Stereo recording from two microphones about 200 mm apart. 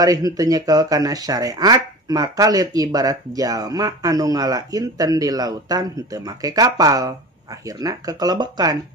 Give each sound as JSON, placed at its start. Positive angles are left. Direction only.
{"t": 0.0, "sound": "speech", "side_deg": -20}